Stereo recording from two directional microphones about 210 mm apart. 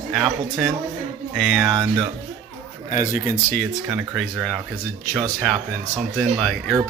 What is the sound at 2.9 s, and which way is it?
Speech, 40° left (ahead or behind).